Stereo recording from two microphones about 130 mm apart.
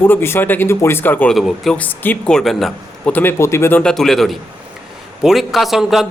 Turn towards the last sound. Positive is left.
turn(degrees=0)  # may be behind; listen again after turning